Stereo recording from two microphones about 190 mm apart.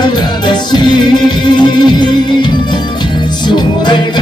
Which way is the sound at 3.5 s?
25° left (ahead or behind).